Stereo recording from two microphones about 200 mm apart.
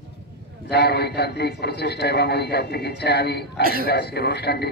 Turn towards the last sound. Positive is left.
turn(degrees=55)  # may be behind; listen again after turning